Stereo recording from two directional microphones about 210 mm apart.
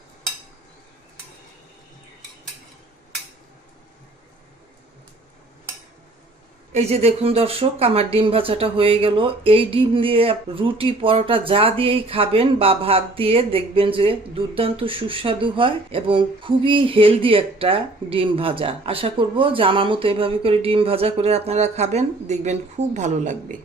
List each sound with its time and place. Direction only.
6.7 s speech: 30° right (ahead or behind)